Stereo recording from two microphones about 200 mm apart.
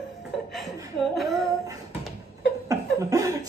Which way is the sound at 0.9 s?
Centre (ahead or behind).